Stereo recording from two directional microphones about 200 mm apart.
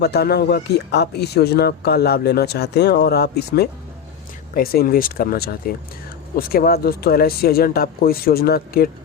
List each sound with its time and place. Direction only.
0.0 s speech: 55° left (ahead or behind)